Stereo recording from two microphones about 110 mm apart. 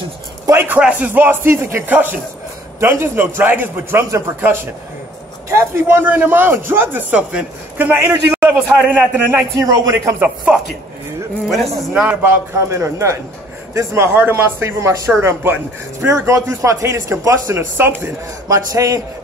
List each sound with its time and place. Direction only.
0.5 s a man's voice: 20° right (ahead or behind)
9.6 s a man's voice: 30° right (ahead or behind)
10.1 s a man's voice: 10° right (ahead or behind)
11.4 s speech: centre (ahead or behind)
11.9 s a man's voice: 10° right (ahead or behind)
12.6 s a man's voice: 30° right (ahead or behind)
18.5 s a man's voice: 30° right (ahead or behind)